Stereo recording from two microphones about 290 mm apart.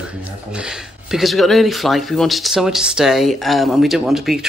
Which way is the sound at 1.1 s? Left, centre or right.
Centre.